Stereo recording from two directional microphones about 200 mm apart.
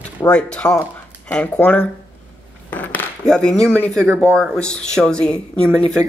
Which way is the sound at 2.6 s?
10° left (ahead or behind).